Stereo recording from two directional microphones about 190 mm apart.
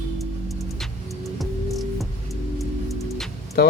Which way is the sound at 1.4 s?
Centre (ahead or behind).